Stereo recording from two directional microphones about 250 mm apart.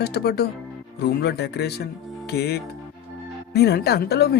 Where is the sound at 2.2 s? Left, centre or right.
Left.